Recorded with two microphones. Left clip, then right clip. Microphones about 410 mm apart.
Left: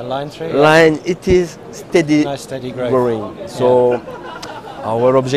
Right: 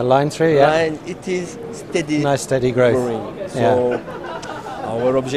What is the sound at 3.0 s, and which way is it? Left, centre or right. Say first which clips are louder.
Speech: left 5 dB; left.